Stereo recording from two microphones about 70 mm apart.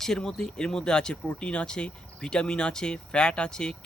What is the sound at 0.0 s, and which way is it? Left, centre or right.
Speech, centre.